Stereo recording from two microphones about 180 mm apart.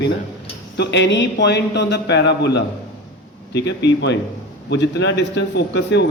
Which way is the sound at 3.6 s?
75° left (ahead or behind).